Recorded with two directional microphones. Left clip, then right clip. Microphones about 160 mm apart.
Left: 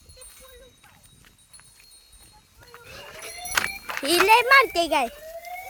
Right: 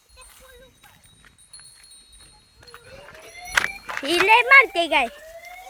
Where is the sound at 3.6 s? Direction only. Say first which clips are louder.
Right 4 dB; 30° right (ahead or behind).